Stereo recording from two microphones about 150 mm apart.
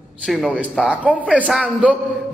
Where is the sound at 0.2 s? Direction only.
Centre (ahead or behind).